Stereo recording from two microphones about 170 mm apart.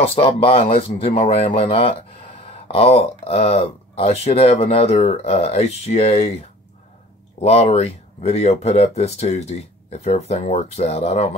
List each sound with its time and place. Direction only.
0.0 s speech: 35° left (ahead or behind)
7.3 s speech: 40° left (ahead or behind)